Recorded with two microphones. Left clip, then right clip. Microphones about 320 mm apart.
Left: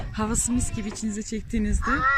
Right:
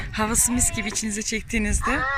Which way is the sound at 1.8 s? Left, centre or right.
Right.